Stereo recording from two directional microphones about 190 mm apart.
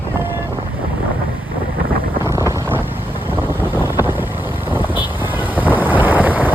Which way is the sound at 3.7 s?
10° right (ahead or behind).